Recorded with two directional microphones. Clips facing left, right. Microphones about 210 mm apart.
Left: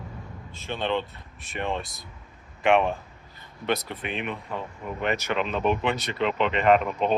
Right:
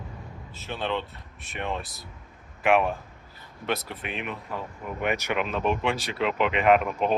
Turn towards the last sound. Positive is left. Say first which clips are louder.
# even
turn(degrees=-5)  # may be behind; listen again after turning